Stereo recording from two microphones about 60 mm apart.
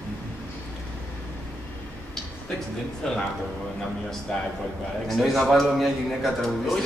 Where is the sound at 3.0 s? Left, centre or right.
Centre.